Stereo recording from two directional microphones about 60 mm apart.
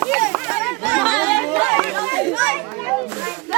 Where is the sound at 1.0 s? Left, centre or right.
Centre.